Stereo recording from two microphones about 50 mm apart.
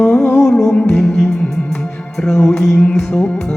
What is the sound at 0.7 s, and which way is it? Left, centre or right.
Music, centre.